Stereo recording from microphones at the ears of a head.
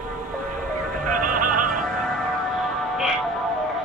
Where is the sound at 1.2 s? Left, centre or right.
Right.